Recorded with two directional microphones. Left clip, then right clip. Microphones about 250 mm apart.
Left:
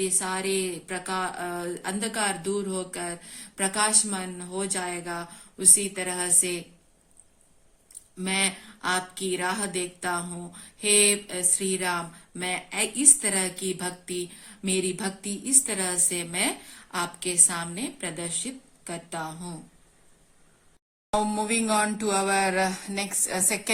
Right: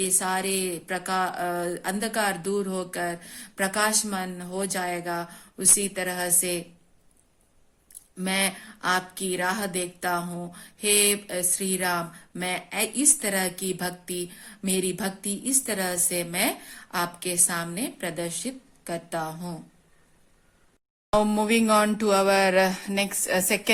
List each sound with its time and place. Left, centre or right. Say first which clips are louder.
0.0 s speech: right 2 dB; right
8.2 s speech: right 1 dB; right
21.1 s speech: right 4 dB; right